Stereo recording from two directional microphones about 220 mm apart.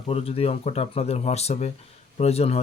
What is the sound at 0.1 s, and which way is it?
Speech, 25° left (ahead or behind).